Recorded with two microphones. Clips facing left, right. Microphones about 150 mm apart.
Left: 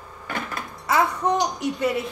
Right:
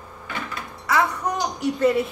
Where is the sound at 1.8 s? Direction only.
5° left (ahead or behind).